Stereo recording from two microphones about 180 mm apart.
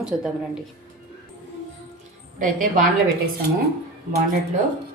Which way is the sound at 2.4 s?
50° right (ahead or behind).